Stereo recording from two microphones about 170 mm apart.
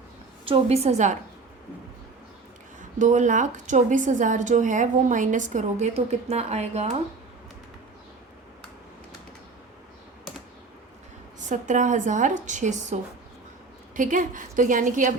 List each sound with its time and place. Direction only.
0.4 s a woman's voice: 35° right (ahead or behind)
3.0 s a woman's voice: 45° right (ahead or behind)
11.4 s a woman's voice: 45° right (ahead or behind)